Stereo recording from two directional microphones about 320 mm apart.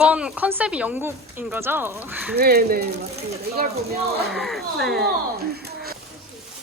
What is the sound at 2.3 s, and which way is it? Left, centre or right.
Speech, right.